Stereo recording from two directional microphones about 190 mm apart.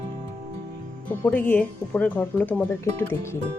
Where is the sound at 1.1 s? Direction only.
10° left (ahead or behind).